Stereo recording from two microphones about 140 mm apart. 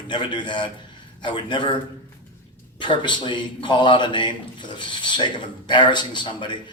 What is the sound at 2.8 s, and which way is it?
A man's voice, 35° left (ahead or behind).